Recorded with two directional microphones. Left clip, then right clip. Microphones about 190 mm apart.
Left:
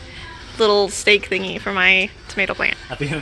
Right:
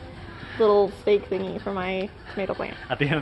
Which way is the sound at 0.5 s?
45° left (ahead or behind).